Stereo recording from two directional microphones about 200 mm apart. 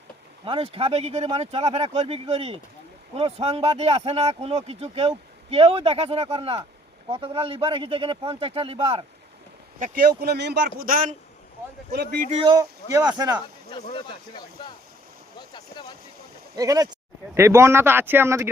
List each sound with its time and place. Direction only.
0.4 s speech: 25° right (ahead or behind)
9.8 s speech: 45° right (ahead or behind)
10.8 s speech: 45° right (ahead or behind)
12.3 s speech: 30° right (ahead or behind)
12.5 s speech: 20° right (ahead or behind)
13.7 s speech: 25° left (ahead or behind)
16.6 s speech: 20° right (ahead or behind)